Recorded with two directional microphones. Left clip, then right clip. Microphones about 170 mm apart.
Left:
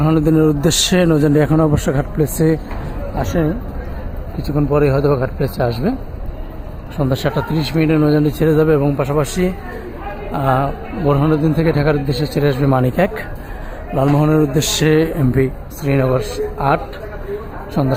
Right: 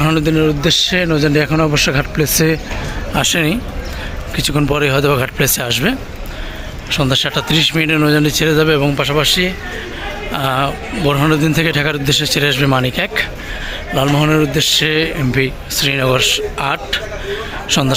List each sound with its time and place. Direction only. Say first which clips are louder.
0.2 s a man's voice: even; 20° left (ahead or behind)
3.2 s speech: right 5 dB; 20° right (ahead or behind)
4.4 s a man's voice: even; 5° right (ahead or behind); by 9.5 s 10° left (ahead or behind)
10.3 s a man's voice: even; centre (ahead or behind)
14.2 s a man's voice: right 2 dB; 10° left (ahead or behind)